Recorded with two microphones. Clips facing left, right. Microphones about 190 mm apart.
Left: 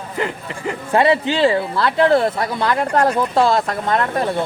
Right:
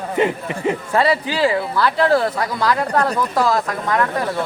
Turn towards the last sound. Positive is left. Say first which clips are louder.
# left 1 dB
turn(degrees=25)  # may be behind; listen again after turning